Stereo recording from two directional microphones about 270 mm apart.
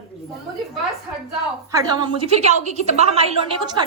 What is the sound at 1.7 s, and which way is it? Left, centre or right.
A woman's voice, centre.